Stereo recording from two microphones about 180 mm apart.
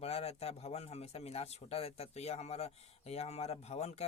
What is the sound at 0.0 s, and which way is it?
A man's voice, 35° left (ahead or behind).